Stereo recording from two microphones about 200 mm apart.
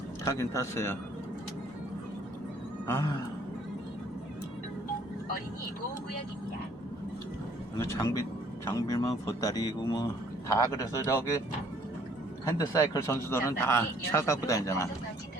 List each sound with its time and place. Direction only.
0.3 s speech: 15° left (ahead or behind)
2.8 s a sound: 15° left (ahead or behind)
7.9 s speech: 15° left (ahead or behind)
12.5 s speech: 15° left (ahead or behind)